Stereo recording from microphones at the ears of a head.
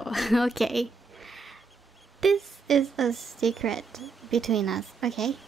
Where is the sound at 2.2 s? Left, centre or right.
Right.